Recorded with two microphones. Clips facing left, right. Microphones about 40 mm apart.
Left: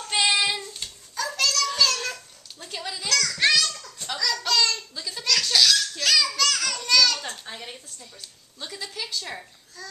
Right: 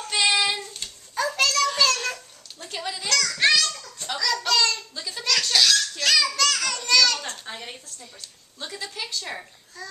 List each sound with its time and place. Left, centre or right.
0.1 s child singing: centre
1.1 s a sound: centre
1.5 s child singing: centre
2.6 s a sound: centre
8.5 s a woman's voice: centre
9.8 s babbling: centre